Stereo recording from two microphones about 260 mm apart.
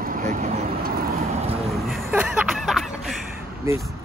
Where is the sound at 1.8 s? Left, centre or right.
Centre.